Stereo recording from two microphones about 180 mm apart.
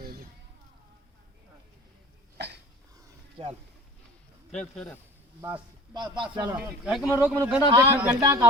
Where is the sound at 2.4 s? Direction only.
70° right (ahead or behind).